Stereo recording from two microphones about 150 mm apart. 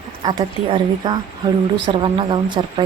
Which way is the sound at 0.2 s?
30° right (ahead or behind).